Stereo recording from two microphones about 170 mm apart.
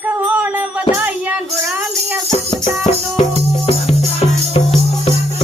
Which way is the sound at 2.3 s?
40° left (ahead or behind).